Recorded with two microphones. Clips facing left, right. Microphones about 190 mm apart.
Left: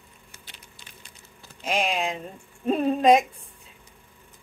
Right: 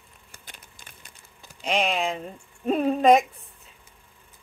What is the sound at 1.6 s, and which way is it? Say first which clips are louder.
A woman's voice: right 1 dB; centre (ahead or behind).